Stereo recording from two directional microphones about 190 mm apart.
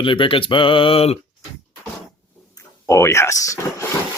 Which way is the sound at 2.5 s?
15° left (ahead or behind).